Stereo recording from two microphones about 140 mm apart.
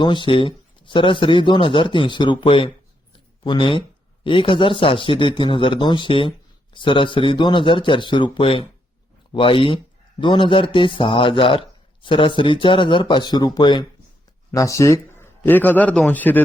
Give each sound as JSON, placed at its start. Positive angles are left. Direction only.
{"t": 0.0, "sound": "a man's voice", "side_deg": 35}